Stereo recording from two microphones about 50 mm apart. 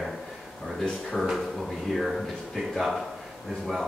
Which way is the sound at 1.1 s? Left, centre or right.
Centre.